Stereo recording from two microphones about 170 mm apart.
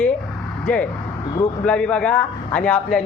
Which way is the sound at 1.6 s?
5° left (ahead or behind).